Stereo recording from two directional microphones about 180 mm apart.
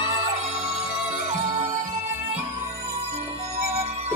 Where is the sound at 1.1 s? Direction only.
40° right (ahead or behind).